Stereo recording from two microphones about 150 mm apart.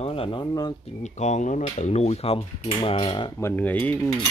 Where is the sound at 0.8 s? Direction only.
50° left (ahead or behind); by 3.3 s 30° left (ahead or behind).